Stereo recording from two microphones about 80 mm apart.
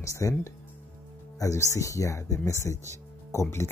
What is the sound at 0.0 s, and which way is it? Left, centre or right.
Speech, left.